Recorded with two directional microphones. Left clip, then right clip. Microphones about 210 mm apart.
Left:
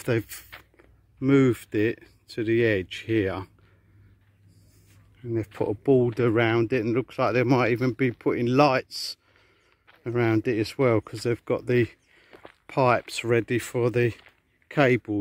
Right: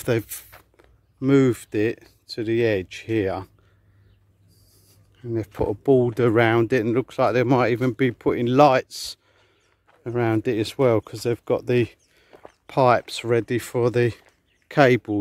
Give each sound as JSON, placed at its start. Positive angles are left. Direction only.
{"t": 0.0, "sound": "speech", "side_deg": 0}
{"t": 5.2, "sound": "speech", "side_deg": 0}
{"t": 9.8, "sound": "speech", "side_deg": 5}